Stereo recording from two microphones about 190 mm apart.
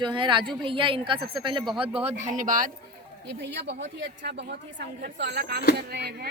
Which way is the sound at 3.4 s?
70° right (ahead or behind).